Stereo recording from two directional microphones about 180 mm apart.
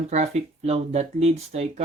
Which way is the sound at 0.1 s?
35° right (ahead or behind).